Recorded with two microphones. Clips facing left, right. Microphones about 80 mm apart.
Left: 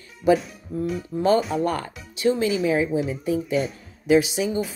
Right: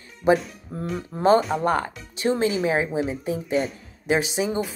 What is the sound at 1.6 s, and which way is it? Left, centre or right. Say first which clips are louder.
A woman's voice: right 2 dB; right.